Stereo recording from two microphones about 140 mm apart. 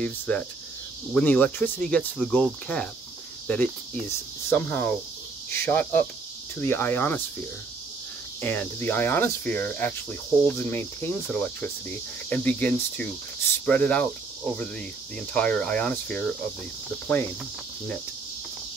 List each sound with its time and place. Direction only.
0.0 s speech: 10° left (ahead or behind)
8.4 s speech: 15° left (ahead or behind)